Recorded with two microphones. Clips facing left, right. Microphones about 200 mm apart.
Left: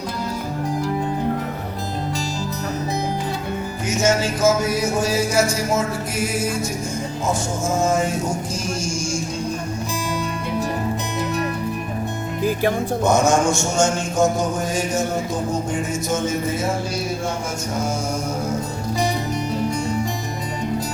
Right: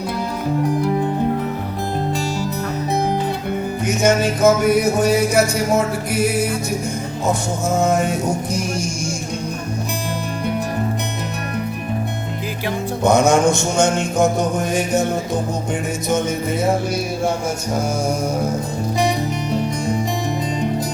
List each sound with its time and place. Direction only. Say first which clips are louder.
3.8 s music: right 3 dB; 60° right (ahead or behind)
13.0 s music: right 4 dB; 60° right (ahead or behind)